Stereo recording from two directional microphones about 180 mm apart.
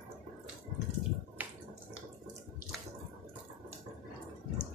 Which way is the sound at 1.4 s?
10° right (ahead or behind).